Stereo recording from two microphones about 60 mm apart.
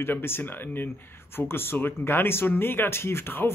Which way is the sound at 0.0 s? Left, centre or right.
Left.